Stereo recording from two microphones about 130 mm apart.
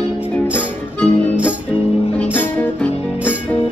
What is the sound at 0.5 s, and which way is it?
Music, 15° left (ahead or behind).